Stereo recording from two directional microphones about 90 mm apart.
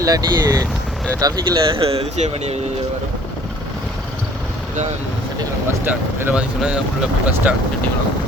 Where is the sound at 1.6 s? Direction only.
85° right.